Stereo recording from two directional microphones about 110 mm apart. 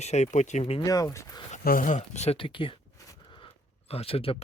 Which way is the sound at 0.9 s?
30° left (ahead or behind).